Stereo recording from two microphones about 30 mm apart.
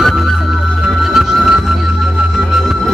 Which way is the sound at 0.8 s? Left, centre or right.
Centre.